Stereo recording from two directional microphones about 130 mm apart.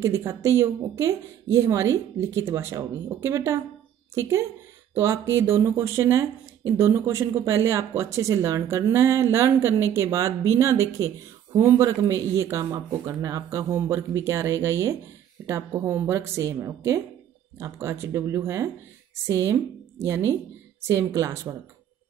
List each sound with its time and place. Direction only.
0.0 s a woman's voice: 20° right (ahead or behind)